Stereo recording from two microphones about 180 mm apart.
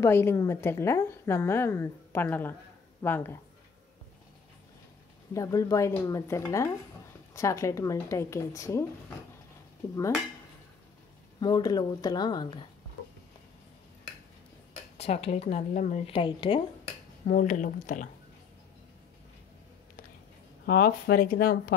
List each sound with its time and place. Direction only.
0.0 s a woman's voice: 15° left (ahead or behind)
5.3 s a woman's voice: 20° left (ahead or behind)
11.3 s speech: 25° left (ahead or behind)
15.0 s speech: 35° left (ahead or behind)
16.1 s speech: 30° left (ahead or behind)
17.3 s speech: 45° left (ahead or behind)
20.6 s speech: 60° left (ahead or behind)